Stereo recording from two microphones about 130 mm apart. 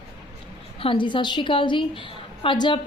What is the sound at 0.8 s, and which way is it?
A woman's voice, 40° left (ahead or behind).